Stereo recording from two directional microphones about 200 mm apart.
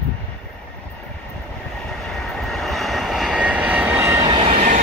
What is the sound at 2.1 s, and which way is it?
Vehicle, centre (ahead or behind).